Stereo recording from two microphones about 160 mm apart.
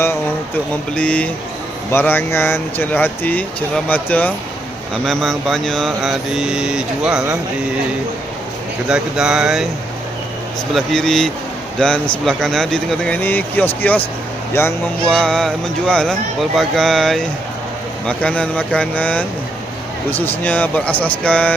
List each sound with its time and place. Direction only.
0.9 s speech: 10° left (ahead or behind)
5.0 s mantra: centre (ahead or behind)
8.9 s mantra: 5° right (ahead or behind)
10.8 s mantra: 5° left (ahead or behind)
11.8 s speech: 5° left (ahead or behind)
12.2 s mantra: 5° left (ahead or behind)
13.8 s speech: 10° left (ahead or behind)
15.0 s mantra: 5° left (ahead or behind)
18.0 s speech: 5° left (ahead or behind)